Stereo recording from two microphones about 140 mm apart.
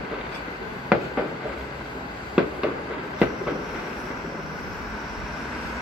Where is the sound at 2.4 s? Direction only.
5° right (ahead or behind).